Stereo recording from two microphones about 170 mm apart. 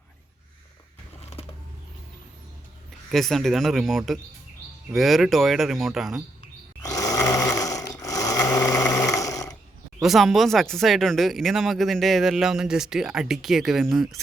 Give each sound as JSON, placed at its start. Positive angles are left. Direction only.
{"t": 3.1, "sound": "speech", "side_deg": 0}
{"t": 6.8, "sound": "snoring", "side_deg": 20}
{"t": 10.0, "sound": "speech", "side_deg": 0}